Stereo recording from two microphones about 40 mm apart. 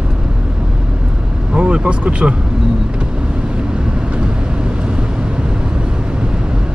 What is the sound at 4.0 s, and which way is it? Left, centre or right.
Vehicle, right.